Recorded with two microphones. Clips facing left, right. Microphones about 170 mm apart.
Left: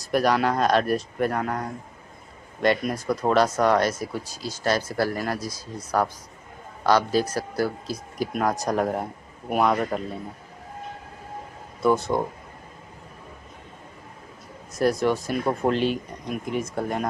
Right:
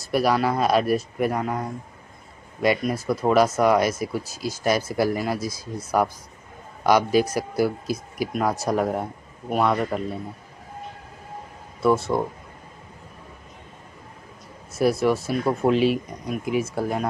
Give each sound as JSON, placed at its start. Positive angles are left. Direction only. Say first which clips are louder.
{"t": 0.0, "sound": "speech", "louder": "even", "side_deg": -5}
{"t": 11.8, "sound": "speech", "louder": "right 1 dB", "side_deg": 0}
{"t": 14.7, "sound": "speech", "louder": "right 2 dB", "side_deg": -5}